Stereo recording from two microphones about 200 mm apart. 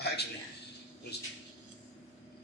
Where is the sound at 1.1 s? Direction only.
55° left (ahead or behind).